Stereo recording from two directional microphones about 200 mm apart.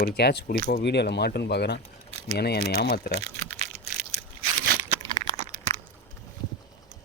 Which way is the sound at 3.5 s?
35° right (ahead or behind).